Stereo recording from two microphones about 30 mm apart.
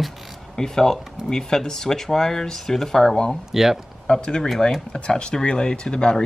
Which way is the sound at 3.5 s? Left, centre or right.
Centre.